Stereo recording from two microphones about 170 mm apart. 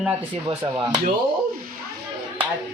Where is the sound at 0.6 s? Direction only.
25° right (ahead or behind).